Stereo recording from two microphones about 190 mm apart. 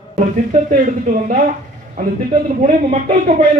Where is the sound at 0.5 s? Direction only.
45° right (ahead or behind).